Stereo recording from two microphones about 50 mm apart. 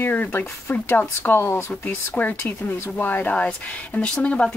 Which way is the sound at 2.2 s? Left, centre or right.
Left.